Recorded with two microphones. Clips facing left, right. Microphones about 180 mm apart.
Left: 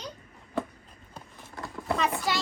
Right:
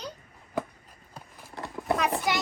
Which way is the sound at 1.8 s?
20° right (ahead or behind).